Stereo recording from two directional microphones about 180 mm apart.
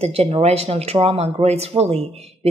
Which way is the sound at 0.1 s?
35° right (ahead or behind).